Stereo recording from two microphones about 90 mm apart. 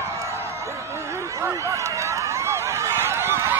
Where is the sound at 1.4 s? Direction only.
35° right (ahead or behind).